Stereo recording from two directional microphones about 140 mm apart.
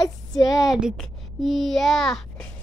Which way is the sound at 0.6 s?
5° right (ahead or behind).